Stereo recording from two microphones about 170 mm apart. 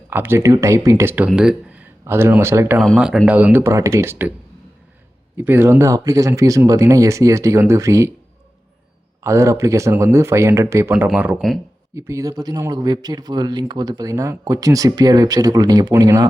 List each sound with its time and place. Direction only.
0.1 s speech: 15° right (ahead or behind)
2.7 s speech: centre (ahead or behind)
5.4 s speech: 10° right (ahead or behind)
9.2 s speech: 15° right (ahead or behind)
11.3 s speech: centre (ahead or behind)
11.9 s speech: 15° right (ahead or behind)